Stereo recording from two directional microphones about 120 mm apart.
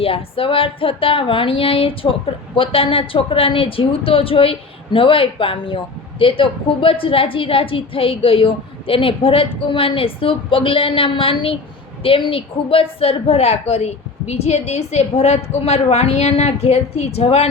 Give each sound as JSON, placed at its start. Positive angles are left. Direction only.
{"t": 0.0, "sound": "a woman's voice", "side_deg": 50}